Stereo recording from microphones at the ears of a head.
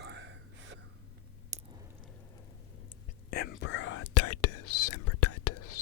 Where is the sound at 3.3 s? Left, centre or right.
Left.